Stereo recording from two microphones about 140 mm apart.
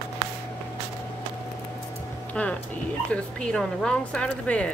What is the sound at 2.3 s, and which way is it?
Speech, 10° left (ahead or behind).